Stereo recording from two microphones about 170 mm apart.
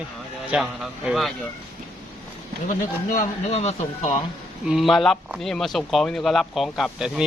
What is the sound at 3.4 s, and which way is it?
Speech, 40° left (ahead or behind).